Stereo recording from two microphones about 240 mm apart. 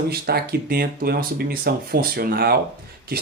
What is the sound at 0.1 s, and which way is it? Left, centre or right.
Speech, right.